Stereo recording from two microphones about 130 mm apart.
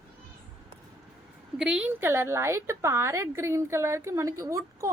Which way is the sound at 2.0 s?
20° right (ahead or behind).